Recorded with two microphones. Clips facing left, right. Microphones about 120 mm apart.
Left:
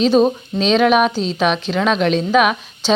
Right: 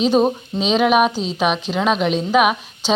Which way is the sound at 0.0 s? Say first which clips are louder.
Left 2 dB; 10° right (ahead or behind).